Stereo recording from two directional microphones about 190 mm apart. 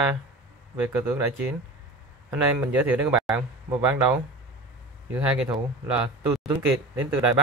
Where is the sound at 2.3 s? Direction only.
5° right (ahead or behind).